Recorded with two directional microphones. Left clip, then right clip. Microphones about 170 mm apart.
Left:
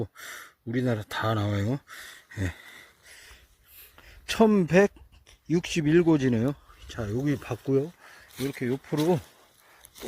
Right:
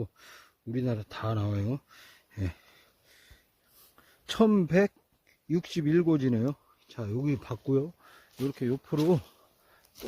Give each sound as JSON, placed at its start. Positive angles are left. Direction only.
{"t": 0.0, "sound": "speech", "side_deg": 20}
{"t": 4.3, "sound": "speech", "side_deg": 10}